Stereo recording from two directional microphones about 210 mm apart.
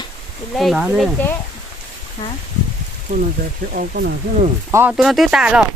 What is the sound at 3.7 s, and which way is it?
Speech, 45° right (ahead or behind).